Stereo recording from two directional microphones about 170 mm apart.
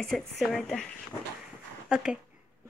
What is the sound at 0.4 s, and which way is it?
Speech, centre (ahead or behind).